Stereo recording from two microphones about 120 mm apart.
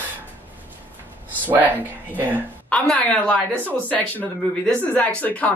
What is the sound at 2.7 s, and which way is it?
A child's voice, 10° left (ahead or behind).